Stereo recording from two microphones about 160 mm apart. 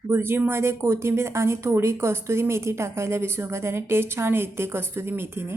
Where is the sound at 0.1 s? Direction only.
15° right (ahead or behind).